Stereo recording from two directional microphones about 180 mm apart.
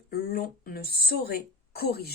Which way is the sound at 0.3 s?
60° left (ahead or behind).